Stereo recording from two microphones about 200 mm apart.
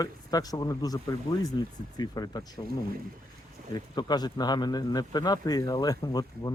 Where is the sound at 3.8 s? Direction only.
20° left (ahead or behind).